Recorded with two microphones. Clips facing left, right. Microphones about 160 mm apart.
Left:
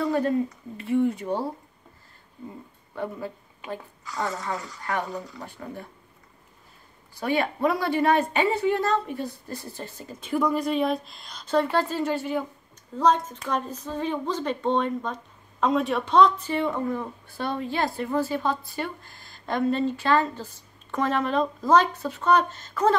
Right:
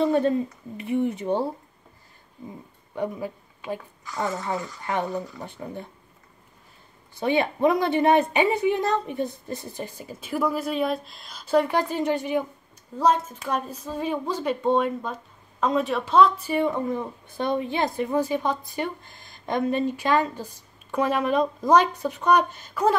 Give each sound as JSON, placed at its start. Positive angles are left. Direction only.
{"t": 0.0, "sound": "a woman's voice", "side_deg": -25}
{"t": 2.9, "sound": "speech", "side_deg": -15}
{"t": 7.2, "sound": "speech", "side_deg": -20}
{"t": 13.0, "sound": "speech", "side_deg": -5}